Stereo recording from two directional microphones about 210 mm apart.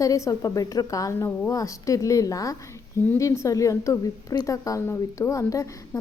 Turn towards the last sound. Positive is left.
turn(degrees=15)  # may be behind; listen again after turning